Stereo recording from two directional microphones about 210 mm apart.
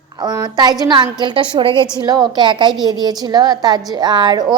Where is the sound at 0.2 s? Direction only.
20° right (ahead or behind).